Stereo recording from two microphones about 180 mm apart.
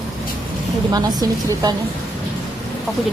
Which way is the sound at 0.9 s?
20° right (ahead or behind).